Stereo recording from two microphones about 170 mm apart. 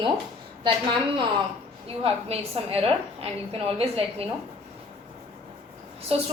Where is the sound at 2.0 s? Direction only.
35° right (ahead or behind).